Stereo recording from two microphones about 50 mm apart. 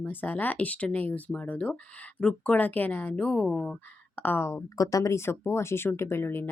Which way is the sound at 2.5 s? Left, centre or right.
Left.